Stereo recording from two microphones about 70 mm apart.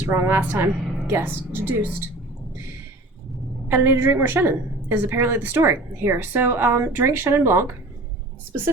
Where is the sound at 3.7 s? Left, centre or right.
Right.